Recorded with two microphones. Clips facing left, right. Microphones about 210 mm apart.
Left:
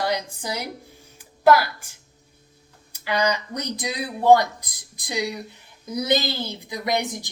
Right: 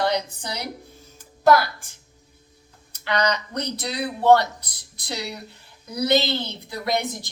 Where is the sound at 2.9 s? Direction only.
10° left (ahead or behind).